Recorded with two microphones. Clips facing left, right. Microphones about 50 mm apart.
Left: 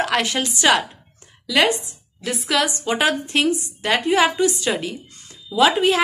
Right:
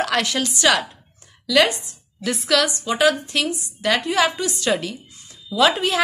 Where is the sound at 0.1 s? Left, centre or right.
Centre.